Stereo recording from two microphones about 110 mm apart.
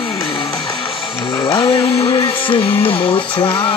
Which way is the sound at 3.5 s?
55° left (ahead or behind).